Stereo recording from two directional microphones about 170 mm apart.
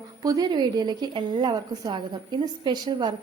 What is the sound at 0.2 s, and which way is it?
A woman's voice, 20° right (ahead or behind).